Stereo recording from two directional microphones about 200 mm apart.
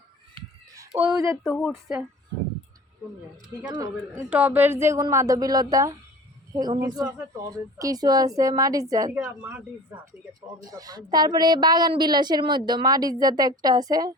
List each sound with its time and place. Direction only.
0.8 s a sound: 10° right (ahead or behind)
1.1 s speech: 15° right (ahead or behind)
1.5 s a woman's voice: centre (ahead or behind)
3.5 s a woman's voice: 15° right (ahead or behind)
10.7 s a woman's voice: 20° right (ahead or behind)